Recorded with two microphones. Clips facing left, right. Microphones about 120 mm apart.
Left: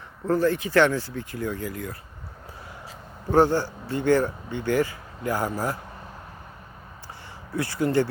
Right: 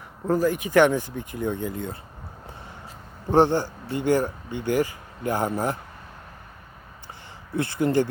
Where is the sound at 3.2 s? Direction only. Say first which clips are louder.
Right 1 dB; 20° right (ahead or behind).